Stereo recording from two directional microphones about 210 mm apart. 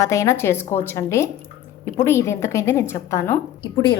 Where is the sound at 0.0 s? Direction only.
15° left (ahead or behind).